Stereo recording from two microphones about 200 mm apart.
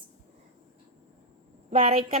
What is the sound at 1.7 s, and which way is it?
Speech, 30° right (ahead or behind).